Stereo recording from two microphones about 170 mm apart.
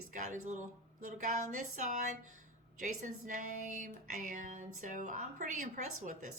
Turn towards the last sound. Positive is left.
turn(degrees=-45)  # may be behind; listen again after turning